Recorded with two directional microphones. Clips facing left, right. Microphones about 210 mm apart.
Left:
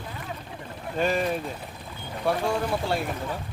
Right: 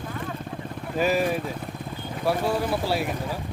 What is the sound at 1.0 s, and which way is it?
Speech, 5° right (ahead or behind).